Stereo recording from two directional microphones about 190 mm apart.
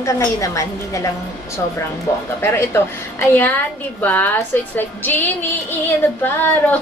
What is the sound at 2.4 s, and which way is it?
A woman's voice, 15° left (ahead or behind).